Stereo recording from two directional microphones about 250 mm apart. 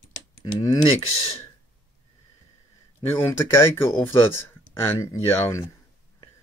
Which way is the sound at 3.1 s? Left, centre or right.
Centre.